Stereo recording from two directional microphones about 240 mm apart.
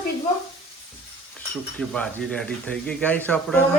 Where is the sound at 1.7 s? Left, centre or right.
Centre.